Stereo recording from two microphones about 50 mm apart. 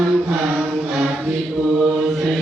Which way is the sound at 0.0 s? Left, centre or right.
Centre.